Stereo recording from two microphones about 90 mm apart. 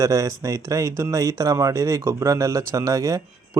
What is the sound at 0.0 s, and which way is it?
Speech, 35° right (ahead or behind).